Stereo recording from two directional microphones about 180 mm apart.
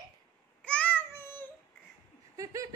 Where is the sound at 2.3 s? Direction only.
20° right (ahead or behind).